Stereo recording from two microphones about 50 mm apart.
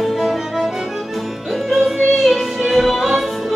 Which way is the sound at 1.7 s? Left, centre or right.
Centre.